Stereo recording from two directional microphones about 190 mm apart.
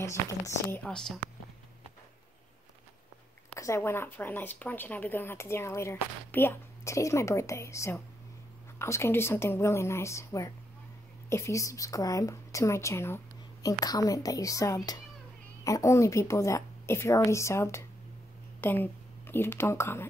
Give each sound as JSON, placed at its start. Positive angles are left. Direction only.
{"t": 0.0, "sound": "speech", "side_deg": 15}
{"t": 0.8, "sound": "speech", "side_deg": 5}
{"t": 3.5, "sound": "a woman's voice", "side_deg": 15}